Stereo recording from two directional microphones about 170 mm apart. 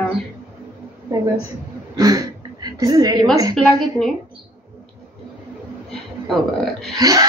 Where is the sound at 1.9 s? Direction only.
20° right (ahead or behind).